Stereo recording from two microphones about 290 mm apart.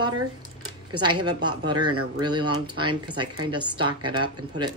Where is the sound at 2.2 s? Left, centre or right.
Centre.